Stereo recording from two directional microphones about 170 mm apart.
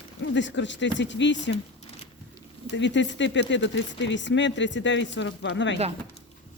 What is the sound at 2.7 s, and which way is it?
Speech, 90° left.